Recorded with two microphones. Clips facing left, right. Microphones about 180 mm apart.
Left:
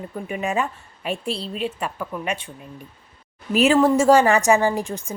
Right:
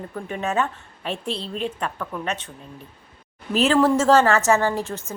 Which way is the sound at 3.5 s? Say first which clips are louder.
Left 2 dB; 10° left (ahead or behind).